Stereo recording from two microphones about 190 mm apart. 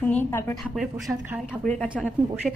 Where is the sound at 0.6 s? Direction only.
Centre (ahead or behind).